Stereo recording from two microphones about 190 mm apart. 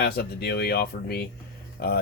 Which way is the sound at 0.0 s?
55° left (ahead or behind).